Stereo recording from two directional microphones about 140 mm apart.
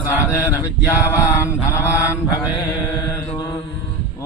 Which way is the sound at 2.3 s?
25° left (ahead or behind).